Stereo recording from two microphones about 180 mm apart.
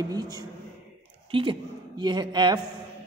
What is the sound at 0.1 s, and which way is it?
A woman's voice, 20° right (ahead or behind).